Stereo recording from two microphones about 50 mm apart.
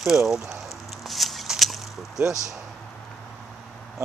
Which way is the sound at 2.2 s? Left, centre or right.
Centre.